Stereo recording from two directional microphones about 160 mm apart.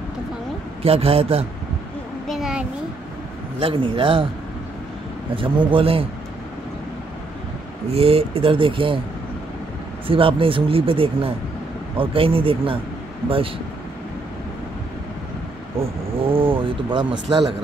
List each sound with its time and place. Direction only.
0.8 s speech: 40° right (ahead or behind)
2.2 s a sound: centre (ahead or behind)
3.5 s speech: 35° right (ahead or behind)
5.3 s speech: 35° right (ahead or behind)
7.9 s speech: 35° right (ahead or behind)
10.0 s speech: 35° right (ahead or behind)
16.2 s speech: 35° right (ahead or behind)